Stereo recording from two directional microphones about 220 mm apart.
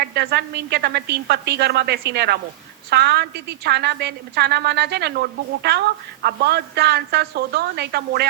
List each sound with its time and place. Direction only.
0.0 s a woman's voice: 50° right (ahead or behind)